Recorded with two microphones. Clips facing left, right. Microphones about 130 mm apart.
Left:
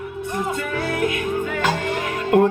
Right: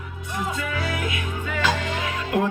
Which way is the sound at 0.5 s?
45° left (ahead or behind).